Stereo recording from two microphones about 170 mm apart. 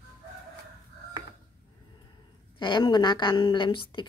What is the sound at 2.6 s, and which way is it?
Speech, 25° left (ahead or behind).